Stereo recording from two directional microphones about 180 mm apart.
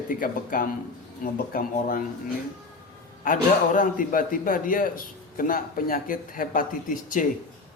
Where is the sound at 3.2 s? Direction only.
50° left (ahead or behind).